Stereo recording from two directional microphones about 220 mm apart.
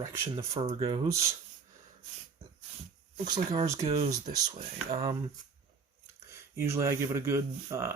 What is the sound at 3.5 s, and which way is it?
Speech, 15° right (ahead or behind).